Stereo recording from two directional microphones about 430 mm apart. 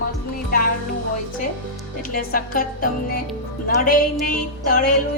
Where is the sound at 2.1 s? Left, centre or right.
Centre.